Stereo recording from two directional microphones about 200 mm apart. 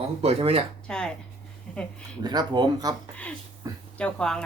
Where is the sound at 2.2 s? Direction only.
20° right (ahead or behind).